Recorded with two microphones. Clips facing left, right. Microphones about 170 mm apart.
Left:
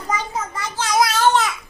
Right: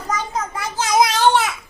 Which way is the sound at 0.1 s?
10° left (ahead or behind).